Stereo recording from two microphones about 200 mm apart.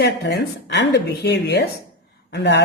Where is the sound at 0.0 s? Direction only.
60° left (ahead or behind).